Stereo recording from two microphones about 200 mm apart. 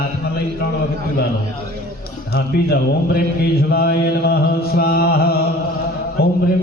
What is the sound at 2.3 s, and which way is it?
Mantra, 50° left (ahead or behind).